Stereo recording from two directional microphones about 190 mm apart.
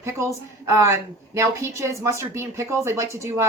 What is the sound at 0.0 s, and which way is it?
Speech, 15° right (ahead or behind).